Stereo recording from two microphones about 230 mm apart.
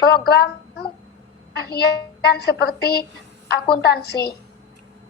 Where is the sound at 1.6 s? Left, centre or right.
Left.